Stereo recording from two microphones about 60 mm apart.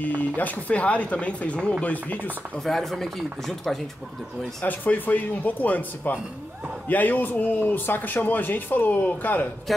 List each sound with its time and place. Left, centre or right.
0.0 s speech: left
2.6 s speech: centre
4.6 s a man's voice: left
9.7 s speech: centre